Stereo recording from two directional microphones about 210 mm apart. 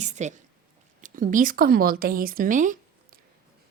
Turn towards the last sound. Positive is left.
turn(degrees=-40)  # may be behind; listen again after turning